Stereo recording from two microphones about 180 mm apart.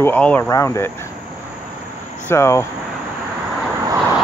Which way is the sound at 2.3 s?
15° left (ahead or behind).